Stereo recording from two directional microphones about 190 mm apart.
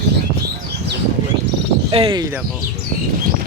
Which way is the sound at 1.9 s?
25° right (ahead or behind).